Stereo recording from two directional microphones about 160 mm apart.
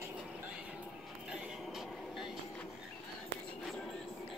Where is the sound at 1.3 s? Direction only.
5° right (ahead or behind).